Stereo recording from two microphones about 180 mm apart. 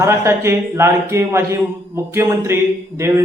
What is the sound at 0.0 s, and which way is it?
Speech, 15° right (ahead or behind).